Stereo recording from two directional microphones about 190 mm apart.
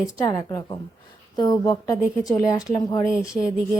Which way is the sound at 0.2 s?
20° left (ahead or behind).